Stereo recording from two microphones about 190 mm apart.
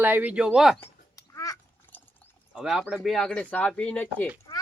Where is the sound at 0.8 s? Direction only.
15° left (ahead or behind).